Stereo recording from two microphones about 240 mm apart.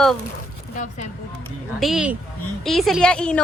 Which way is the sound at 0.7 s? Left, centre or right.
Left.